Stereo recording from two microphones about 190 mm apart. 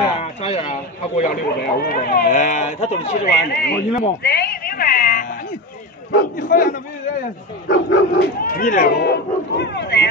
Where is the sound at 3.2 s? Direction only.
60° left (ahead or behind).